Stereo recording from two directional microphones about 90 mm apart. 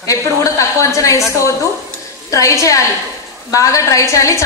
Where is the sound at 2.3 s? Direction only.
35° left (ahead or behind).